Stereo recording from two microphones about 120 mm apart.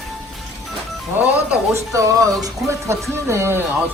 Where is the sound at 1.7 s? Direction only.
25° right (ahead or behind).